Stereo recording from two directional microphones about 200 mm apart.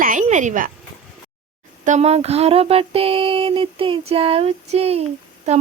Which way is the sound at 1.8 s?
35° right (ahead or behind).